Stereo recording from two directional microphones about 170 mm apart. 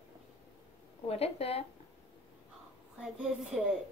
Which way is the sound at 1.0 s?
35° left (ahead or behind).